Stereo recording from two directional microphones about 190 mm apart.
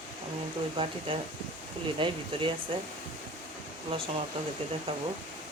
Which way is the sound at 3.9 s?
30° right (ahead or behind).